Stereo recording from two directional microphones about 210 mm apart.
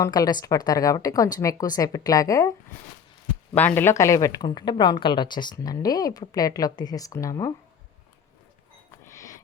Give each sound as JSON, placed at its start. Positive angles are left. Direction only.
{"t": 0.0, "sound": "a woman's voice", "side_deg": 20}
{"t": 3.5, "sound": "a woman's voice", "side_deg": 5}
{"t": 9.0, "sound": "a sound", "side_deg": 15}